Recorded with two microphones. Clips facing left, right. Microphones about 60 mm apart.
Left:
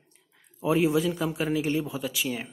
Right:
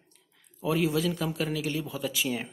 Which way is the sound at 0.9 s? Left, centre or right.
Centre.